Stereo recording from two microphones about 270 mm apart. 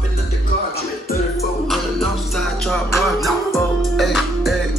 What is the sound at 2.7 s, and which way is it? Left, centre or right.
Music, centre.